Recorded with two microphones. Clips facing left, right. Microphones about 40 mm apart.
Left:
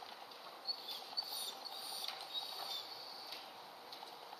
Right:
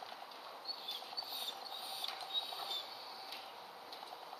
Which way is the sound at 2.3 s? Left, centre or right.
Right.